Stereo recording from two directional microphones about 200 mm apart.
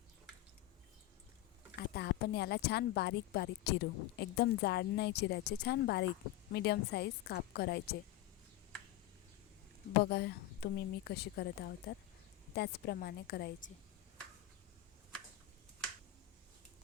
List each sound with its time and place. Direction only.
1.9 s a woman's voice: 55° left (ahead or behind)
10.0 s a woman's voice: 55° left (ahead or behind)